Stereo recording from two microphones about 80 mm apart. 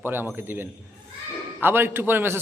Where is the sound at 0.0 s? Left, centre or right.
Right.